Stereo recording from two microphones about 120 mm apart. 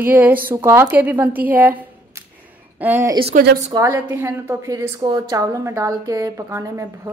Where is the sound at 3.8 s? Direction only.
25° right (ahead or behind).